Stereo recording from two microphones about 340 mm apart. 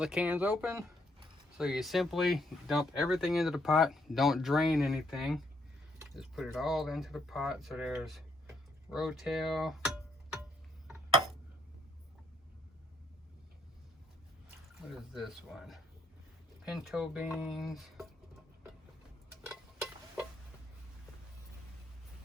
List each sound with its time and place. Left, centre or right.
0.0 s speech: centre
15.1 s speech: centre
19.5 s a sound: centre